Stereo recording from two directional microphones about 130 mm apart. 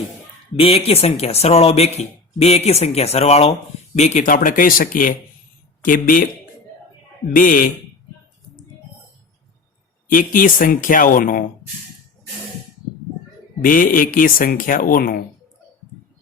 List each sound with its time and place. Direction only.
0.5 s speech: 45° left (ahead or behind)
3.9 s speech: 65° left (ahead or behind); by 6.2 s 90° left
7.3 s speech: 90° left
10.1 s speech: 90° left
13.7 s speech: 90° left